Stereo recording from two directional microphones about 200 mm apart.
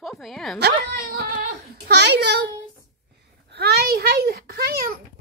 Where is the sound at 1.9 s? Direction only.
55° right (ahead or behind).